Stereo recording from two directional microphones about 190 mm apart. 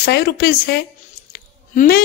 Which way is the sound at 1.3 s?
55° left (ahead or behind).